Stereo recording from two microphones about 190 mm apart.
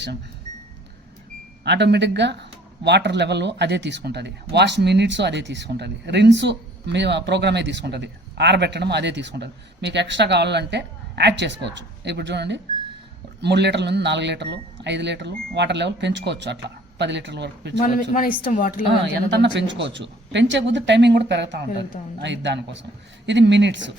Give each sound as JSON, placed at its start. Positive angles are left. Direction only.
{"t": 1.6, "sound": "speech", "side_deg": -65}
{"t": 17.7, "sound": "speech", "side_deg": 45}
{"t": 19.0, "sound": "speech", "side_deg": -65}